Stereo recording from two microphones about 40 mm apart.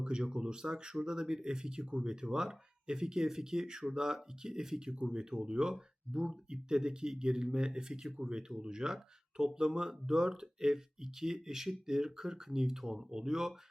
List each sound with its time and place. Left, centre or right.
0.0 s speech: centre